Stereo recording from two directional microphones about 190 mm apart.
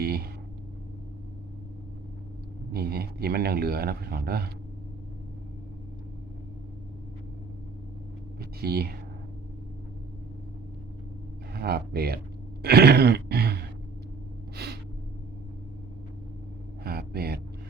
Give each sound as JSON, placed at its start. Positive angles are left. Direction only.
{"t": 0.0, "sound": "a sound", "side_deg": -55}
{"t": 2.7, "sound": "speech", "side_deg": -55}
{"t": 8.4, "sound": "speech", "side_deg": -55}
{"t": 11.5, "sound": "speech", "side_deg": -55}
{"t": 12.6, "sound": "a sound", "side_deg": -55}
{"t": 14.5, "sound": "gasp", "side_deg": -60}
{"t": 16.8, "sound": "vehicle", "side_deg": -55}